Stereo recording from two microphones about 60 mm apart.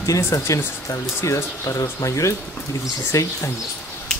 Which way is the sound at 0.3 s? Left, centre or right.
Left.